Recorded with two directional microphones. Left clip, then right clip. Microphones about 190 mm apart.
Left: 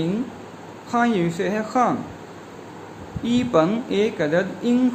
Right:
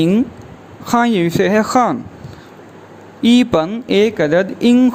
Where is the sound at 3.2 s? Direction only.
55° right (ahead or behind).